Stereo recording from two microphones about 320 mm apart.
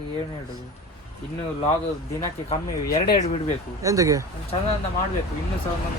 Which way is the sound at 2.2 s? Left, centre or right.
Centre.